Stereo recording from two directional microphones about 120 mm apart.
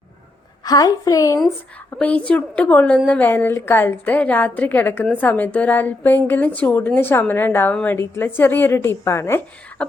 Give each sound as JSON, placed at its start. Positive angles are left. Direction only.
{"t": 0.6, "sound": "a woman's voice", "side_deg": 30}
{"t": 2.0, "sound": "a woman's voice", "side_deg": 10}